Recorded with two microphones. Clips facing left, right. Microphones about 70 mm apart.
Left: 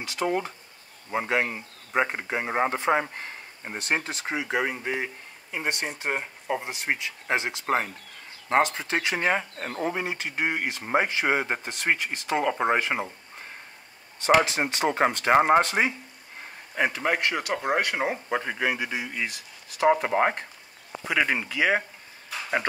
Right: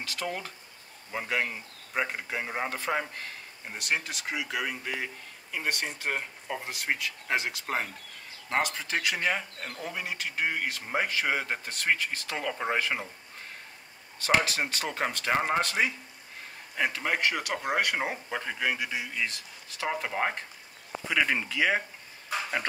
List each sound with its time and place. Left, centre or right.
0.0 s speech: centre
14.4 s speech: left
15.3 s speech: left
17.6 s speech: centre
18.3 s speech: centre
21.1 s speech: centre